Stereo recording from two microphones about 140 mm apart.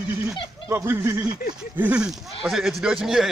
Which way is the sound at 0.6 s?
20° right (ahead or behind).